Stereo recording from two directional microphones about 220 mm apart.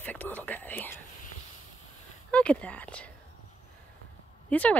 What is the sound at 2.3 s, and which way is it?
Speech, 5° left (ahead or behind).